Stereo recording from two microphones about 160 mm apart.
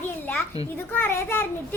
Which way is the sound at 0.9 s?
15° left (ahead or behind).